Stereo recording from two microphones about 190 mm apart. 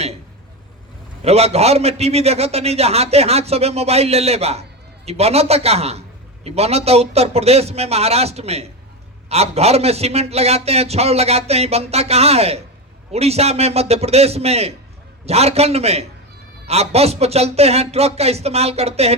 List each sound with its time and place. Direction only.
1.2 s a man's voice: 35° right (ahead or behind)